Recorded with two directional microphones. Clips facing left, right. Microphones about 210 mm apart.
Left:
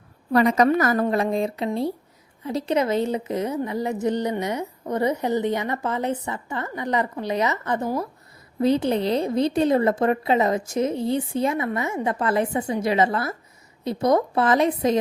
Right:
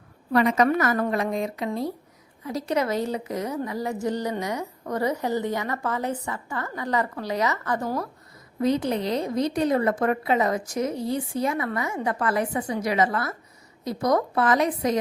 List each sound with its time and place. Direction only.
0.3 s a woman's voice: 40° left (ahead or behind)